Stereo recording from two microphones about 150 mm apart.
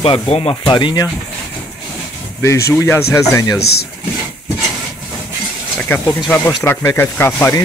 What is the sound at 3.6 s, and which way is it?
Speech, 90° left.